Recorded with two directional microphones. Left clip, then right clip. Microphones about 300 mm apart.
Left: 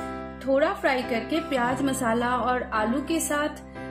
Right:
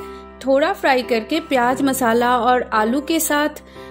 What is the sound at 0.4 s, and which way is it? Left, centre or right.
A woman's voice, right.